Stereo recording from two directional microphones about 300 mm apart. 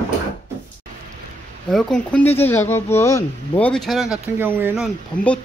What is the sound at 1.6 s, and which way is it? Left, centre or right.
Speech, centre.